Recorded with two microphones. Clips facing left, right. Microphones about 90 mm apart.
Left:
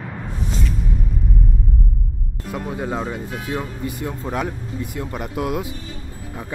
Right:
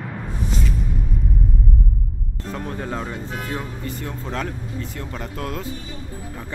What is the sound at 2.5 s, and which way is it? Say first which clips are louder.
Speech: left 3 dB; 10° left (ahead or behind).